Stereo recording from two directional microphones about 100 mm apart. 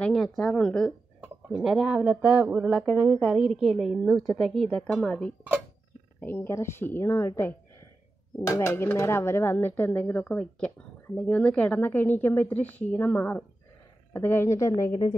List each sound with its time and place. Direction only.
0.0 s speech: 5° left (ahead or behind)
1.5 s a woman's voice: 5° right (ahead or behind)
6.2 s speech: 20° left (ahead or behind); by 15.0 s 40° left (ahead or behind)